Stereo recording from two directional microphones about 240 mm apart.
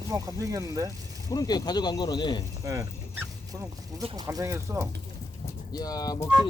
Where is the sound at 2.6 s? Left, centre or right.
Centre.